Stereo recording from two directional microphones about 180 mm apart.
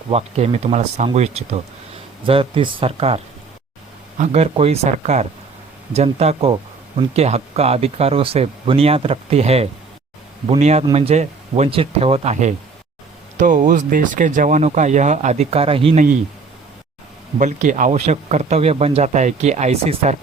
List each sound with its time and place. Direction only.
0.1 s speech: 35° right (ahead or behind)
4.2 s speech: 35° right (ahead or behind)
17.3 s speech: 45° right (ahead or behind)